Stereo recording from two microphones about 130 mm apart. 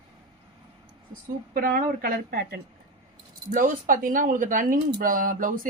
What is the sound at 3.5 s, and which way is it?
Speech, 90° right.